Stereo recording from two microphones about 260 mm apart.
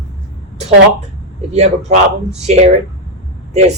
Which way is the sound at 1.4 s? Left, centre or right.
Right.